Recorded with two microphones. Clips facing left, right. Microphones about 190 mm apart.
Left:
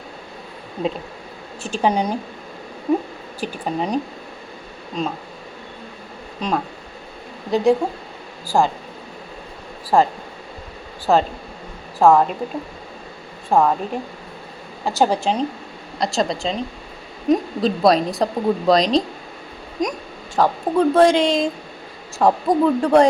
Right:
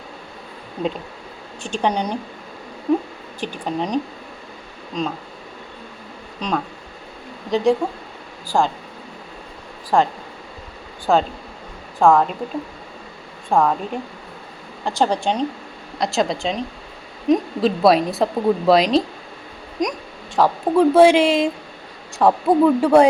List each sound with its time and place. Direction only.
1.6 s a woman's voice: 5° left (ahead or behind)
3.4 s a woman's voice: 5° left (ahead or behind)
6.4 s a woman's voice: 5° left (ahead or behind)
9.9 s a woman's voice: 5° left (ahead or behind)
13.5 s a woman's voice: 5° left (ahead or behind)